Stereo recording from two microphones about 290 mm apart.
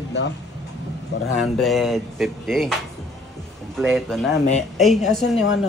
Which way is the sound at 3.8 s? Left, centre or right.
Centre.